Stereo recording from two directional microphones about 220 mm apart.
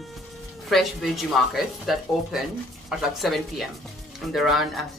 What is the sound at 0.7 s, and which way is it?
Speech, centre (ahead or behind).